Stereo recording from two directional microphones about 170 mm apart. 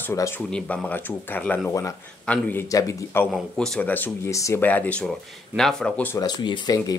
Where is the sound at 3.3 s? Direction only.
5° left (ahead or behind).